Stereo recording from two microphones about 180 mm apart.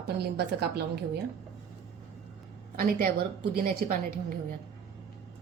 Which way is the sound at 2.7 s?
55° right (ahead or behind).